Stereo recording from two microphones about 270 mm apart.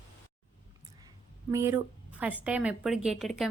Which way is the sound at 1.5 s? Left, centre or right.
Centre.